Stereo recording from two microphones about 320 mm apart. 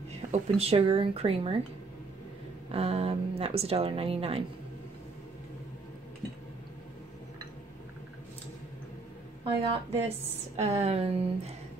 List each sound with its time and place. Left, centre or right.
0.3 s speech: centre
2.7 s speech: centre
9.4 s speech: centre